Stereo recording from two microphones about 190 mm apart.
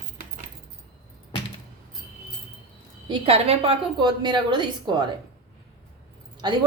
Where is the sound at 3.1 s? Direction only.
30° right (ahead or behind).